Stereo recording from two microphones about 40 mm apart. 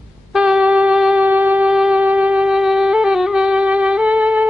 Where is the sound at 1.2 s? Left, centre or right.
Right.